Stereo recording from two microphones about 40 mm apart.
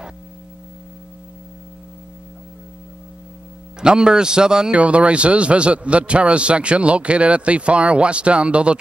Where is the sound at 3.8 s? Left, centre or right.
Centre.